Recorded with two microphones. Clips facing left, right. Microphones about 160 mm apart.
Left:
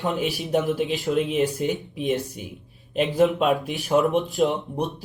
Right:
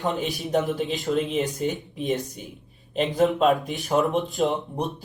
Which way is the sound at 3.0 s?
40° right (ahead or behind).